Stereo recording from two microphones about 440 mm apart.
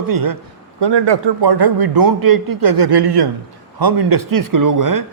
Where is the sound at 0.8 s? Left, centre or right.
Right.